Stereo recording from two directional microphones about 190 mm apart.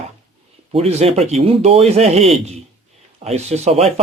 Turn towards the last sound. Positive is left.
turn(degrees=-35)  # may be behind; listen again after turning